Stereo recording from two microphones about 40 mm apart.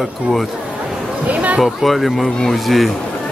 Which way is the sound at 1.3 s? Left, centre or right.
Right.